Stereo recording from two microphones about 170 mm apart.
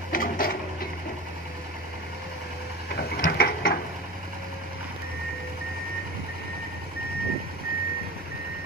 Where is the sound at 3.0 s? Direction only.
65° left (ahead or behind).